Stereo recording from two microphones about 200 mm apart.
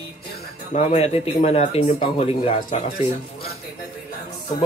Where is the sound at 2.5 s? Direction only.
45° left (ahead or behind).